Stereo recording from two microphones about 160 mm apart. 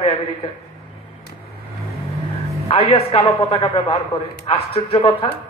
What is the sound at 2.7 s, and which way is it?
A man's voice, 40° left (ahead or behind).